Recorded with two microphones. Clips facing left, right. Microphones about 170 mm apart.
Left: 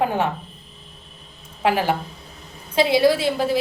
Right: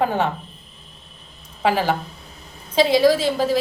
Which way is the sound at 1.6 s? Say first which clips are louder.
Even; 10° left (ahead or behind).